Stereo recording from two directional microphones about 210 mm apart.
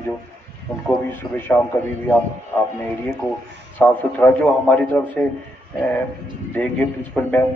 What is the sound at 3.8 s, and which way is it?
A man's voice, 5° left (ahead or behind).